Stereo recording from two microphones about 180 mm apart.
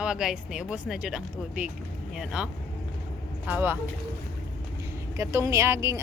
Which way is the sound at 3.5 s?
10° right (ahead or behind).